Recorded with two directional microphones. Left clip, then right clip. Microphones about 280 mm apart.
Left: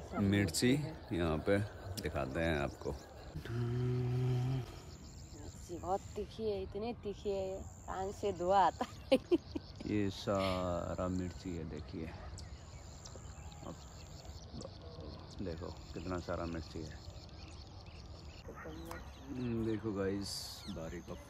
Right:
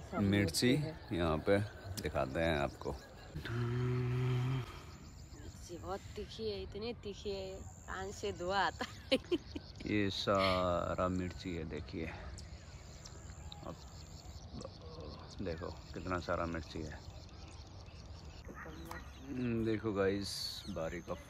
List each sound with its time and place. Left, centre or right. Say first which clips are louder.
0.2 s speech: right 1 dB; centre
2.0 s livestock: right 2 dB; centre
5.7 s speech: left 6 dB; left
9.8 s livestock: right 3 dB; centre
10.6 s speech: right 4 dB; centre
15.3 s speech: right 2 dB; centre
18.9 s speech: even; centre